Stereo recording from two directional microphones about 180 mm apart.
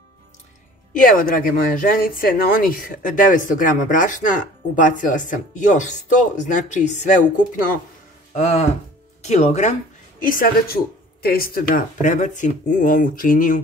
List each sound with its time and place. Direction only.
0.9 s speech: 50° left (ahead or behind)
8.4 s speech: 40° left (ahead or behind)
10.2 s speech: 55° left (ahead or behind)